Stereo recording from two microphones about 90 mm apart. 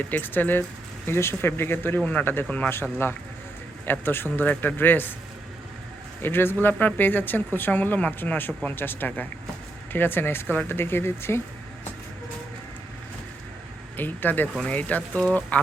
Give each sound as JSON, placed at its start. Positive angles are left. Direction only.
{"t": 0.0, "sound": "speech", "side_deg": 20}
{"t": 4.0, "sound": "speech", "side_deg": 25}
{"t": 6.2, "sound": "speech", "side_deg": 25}
{"t": 13.9, "sound": "speech", "side_deg": 20}